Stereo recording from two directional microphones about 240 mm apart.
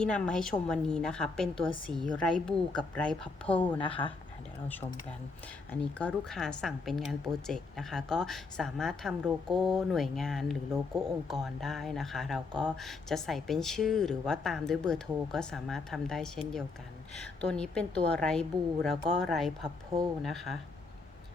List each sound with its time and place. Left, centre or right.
0.0 s a woman's voice: centre
1.5 s speech: left
1.9 s a woman's voice: centre
3.8 s speech: left
5.8 s a woman's voice: centre